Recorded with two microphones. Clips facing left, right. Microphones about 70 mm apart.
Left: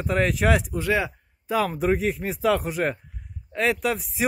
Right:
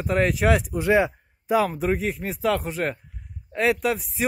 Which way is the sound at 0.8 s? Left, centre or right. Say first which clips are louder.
Right 4 dB; right.